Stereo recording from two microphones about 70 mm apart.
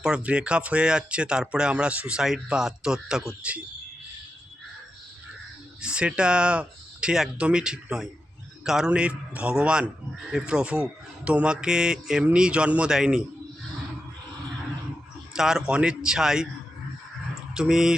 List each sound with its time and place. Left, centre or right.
0.0 s speech: centre
5.8 s a man's voice: centre
8.9 s speech: centre
15.3 s speech: centre
17.5 s speech: centre